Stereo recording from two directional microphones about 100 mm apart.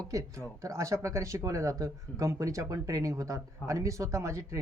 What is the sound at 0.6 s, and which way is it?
A man's voice, 30° right (ahead or behind).